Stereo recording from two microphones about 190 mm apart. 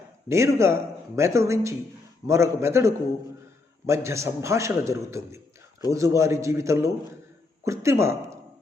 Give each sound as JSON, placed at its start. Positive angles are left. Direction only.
{"t": 0.3, "sound": "a man's voice", "side_deg": -15}